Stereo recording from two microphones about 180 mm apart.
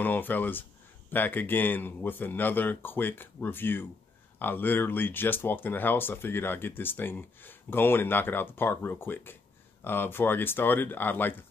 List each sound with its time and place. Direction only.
0.0 s speech: 10° left (ahead or behind)